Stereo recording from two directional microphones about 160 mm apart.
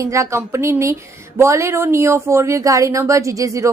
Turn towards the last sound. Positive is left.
turn(degrees=-20)  # may be behind; listen again after turning